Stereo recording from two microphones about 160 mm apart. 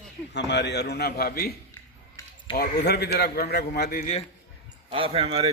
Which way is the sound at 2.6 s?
80° left.